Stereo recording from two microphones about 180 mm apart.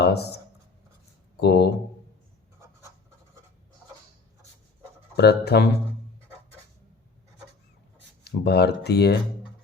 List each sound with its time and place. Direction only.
0.0 s speech: 65° left (ahead or behind)
1.4 s speech: 65° left (ahead or behind)
5.1 s speech: 65° left (ahead or behind)
8.2 s speech: 65° left (ahead or behind)